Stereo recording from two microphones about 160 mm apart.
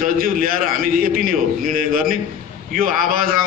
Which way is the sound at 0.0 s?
60° right (ahead or behind).